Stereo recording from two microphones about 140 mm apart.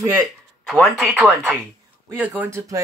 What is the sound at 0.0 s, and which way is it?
Speech, 25° right (ahead or behind).